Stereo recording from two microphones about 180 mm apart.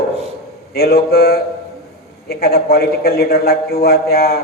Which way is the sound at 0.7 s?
60° left (ahead or behind).